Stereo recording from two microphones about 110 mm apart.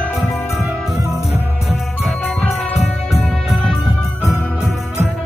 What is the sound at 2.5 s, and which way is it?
Music, centre (ahead or behind).